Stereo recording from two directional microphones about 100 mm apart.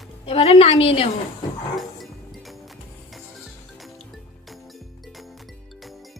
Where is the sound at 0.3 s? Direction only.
80° left.